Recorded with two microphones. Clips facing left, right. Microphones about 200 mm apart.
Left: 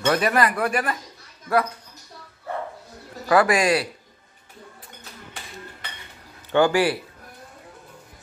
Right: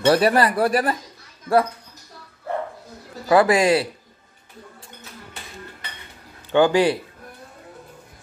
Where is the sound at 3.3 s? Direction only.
25° right (ahead or behind).